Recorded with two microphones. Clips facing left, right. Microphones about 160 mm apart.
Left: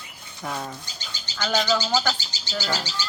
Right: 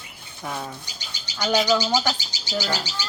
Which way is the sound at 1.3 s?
10° right (ahead or behind).